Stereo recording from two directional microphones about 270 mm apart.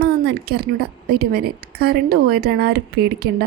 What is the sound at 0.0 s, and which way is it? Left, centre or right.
Speech, right.